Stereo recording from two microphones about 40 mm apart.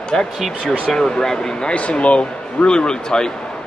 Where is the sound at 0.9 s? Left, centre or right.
Centre.